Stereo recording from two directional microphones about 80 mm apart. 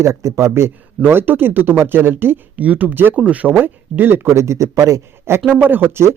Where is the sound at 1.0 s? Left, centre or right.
Right.